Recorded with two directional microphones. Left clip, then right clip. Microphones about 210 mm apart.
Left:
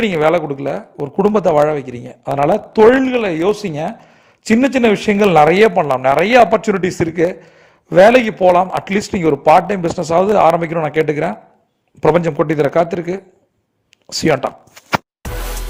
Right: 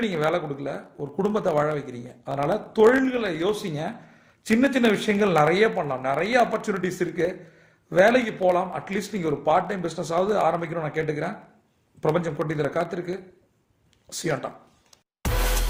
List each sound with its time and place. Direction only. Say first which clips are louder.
0.0 s a man's voice: left 11 dB; 40° left (ahead or behind)